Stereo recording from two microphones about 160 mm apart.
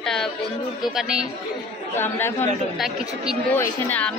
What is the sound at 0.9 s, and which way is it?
Speech, 5° right (ahead or behind).